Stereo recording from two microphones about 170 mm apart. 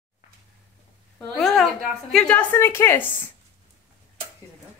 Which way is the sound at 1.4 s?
Centre (ahead or behind).